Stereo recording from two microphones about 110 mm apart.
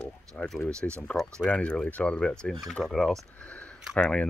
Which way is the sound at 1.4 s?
10° left (ahead or behind).